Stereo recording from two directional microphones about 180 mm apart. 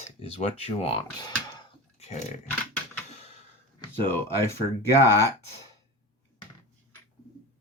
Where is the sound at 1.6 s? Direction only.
35° left (ahead or behind).